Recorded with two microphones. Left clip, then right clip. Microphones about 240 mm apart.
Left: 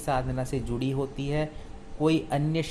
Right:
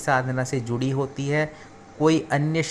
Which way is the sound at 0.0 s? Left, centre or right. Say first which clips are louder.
Right 6 dB; centre.